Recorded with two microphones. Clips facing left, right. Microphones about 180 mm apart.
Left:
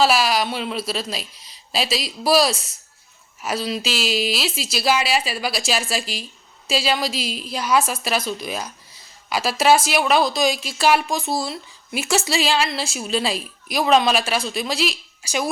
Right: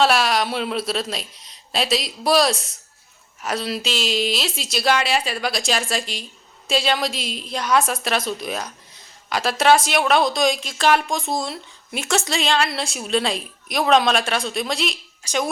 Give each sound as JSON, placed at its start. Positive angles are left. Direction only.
{"t": 0.0, "sound": "a woman's voice", "side_deg": 0}